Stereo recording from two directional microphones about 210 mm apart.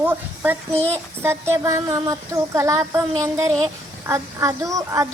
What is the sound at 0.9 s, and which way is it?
Speech, 10° right (ahead or behind).